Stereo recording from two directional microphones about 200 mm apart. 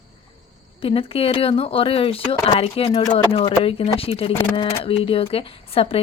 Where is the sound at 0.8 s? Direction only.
30° left (ahead or behind).